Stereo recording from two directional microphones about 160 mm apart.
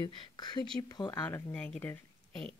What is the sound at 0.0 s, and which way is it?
Speech, 25° left (ahead or behind).